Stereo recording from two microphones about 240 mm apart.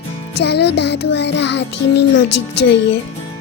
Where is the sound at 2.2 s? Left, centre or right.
Left.